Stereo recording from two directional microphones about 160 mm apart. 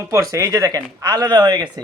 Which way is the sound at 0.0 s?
20° right (ahead or behind).